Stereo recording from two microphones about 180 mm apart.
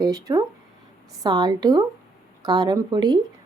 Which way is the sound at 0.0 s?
20° right (ahead or behind).